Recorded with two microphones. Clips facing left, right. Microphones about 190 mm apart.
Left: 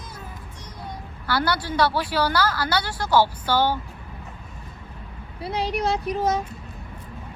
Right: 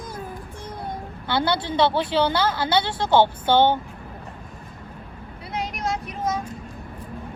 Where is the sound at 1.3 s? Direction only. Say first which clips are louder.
Right 1 dB; 25° right (ahead or behind).